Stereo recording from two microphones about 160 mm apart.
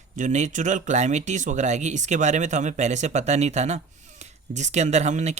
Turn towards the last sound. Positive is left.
turn(degrees=-45)  # may be behind; listen again after turning